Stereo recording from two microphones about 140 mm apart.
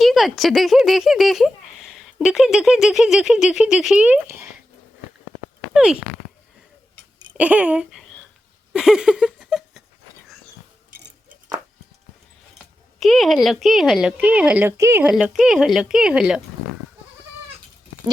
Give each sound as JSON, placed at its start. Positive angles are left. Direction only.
{"t": 0.0, "sound": "speech", "side_deg": 0}
{"t": 5.7, "sound": "speech", "side_deg": -5}
{"t": 7.3, "sound": "speech", "side_deg": -10}
{"t": 8.7, "sound": "a sound", "side_deg": -5}
{"t": 13.0, "sound": "speech", "side_deg": 0}
{"t": 15.1, "sound": "speech", "side_deg": -5}